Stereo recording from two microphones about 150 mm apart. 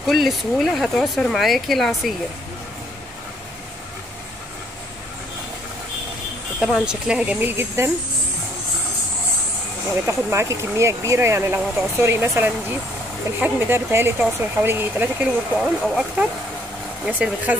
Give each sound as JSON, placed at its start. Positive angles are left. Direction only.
{"t": 0.0, "sound": "speech", "side_deg": 0}
{"t": 6.6, "sound": "speech", "side_deg": -5}
{"t": 10.0, "sound": "speech", "side_deg": -20}